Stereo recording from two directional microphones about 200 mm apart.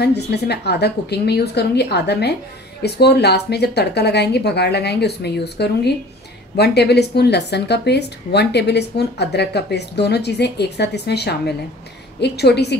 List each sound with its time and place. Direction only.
0.0 s speech: 55° left (ahead or behind)